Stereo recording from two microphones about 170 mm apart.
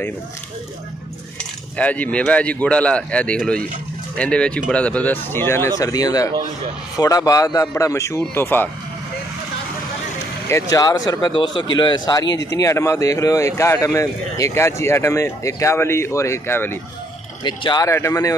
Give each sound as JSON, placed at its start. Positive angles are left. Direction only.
{"t": 1.8, "sound": "speech", "side_deg": 10}
{"t": 10.5, "sound": "speech", "side_deg": 20}
{"t": 17.4, "sound": "speech", "side_deg": 25}